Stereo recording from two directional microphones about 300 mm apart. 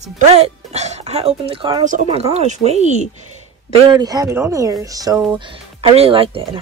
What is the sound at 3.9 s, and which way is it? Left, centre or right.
Speech, centre.